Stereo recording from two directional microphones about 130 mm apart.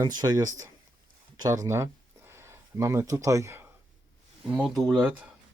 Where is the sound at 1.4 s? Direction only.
25° right (ahead or behind).